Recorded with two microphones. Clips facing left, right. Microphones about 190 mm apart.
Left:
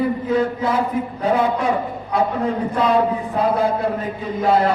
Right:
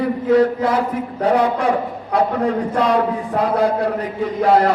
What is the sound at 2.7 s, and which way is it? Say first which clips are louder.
A man's voice: left 2 dB; 80° right.